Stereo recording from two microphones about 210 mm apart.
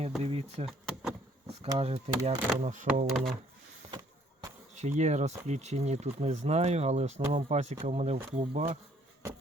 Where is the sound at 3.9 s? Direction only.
20° right (ahead or behind).